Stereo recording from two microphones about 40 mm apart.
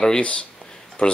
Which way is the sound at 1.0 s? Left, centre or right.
Left.